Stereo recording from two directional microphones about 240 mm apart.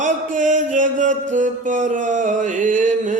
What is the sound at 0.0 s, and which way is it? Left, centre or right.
Music, right.